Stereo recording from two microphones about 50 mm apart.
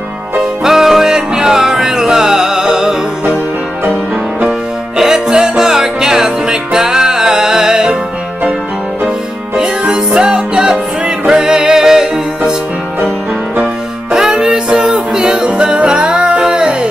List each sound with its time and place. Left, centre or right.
0.4 s music: centre
4.5 s music: centre
10.2 s music: centre
14.1 s music: centre